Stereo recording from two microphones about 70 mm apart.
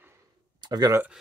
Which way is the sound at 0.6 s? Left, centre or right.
Right.